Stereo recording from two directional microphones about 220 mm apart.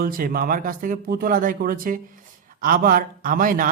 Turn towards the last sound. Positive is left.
turn(degrees=-40)  # may be behind; listen again after turning